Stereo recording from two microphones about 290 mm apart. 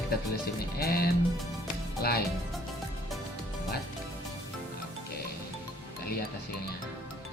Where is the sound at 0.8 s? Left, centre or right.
Left.